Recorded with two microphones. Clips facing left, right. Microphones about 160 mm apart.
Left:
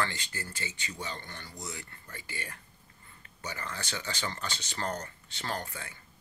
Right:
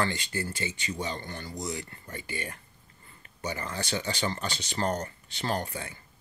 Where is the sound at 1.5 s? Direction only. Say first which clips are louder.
Right 9 dB; 15° right (ahead or behind).